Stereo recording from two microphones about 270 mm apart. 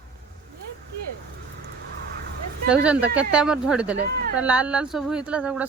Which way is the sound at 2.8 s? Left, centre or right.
Centre.